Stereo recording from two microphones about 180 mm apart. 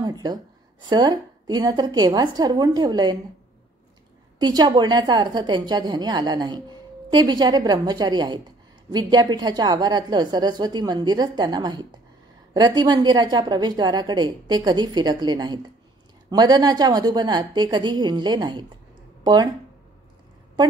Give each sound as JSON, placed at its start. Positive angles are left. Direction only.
{"t": 0.0, "sound": "a woman's voice", "side_deg": -20}
{"t": 4.4, "sound": "a woman's voice", "side_deg": -25}